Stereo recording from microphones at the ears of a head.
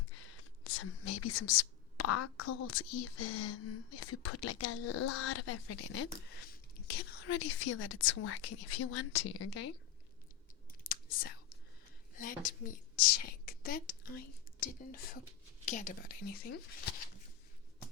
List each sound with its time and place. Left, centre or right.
0.0 s speech: left
10.8 s whispering: left
12.1 s a woman's voice: left